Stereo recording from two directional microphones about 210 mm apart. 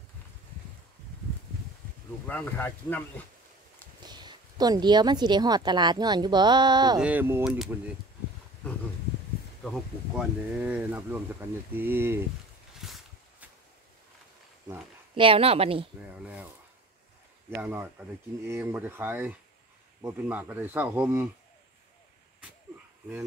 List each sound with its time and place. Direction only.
2.2 s speech: 10° left (ahead or behind)
4.0 s speech: 20° right (ahead or behind)
7.0 s speech: 10° right (ahead or behind)
9.6 s speech: centre (ahead or behind)
12.7 s a sound: centre (ahead or behind)
15.1 s speech: 25° right (ahead or behind)
16.1 s speech: 5° right (ahead or behind)
17.6 s speech: 10° right (ahead or behind)